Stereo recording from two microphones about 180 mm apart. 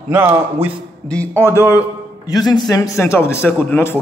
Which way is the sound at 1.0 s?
5° left (ahead or behind).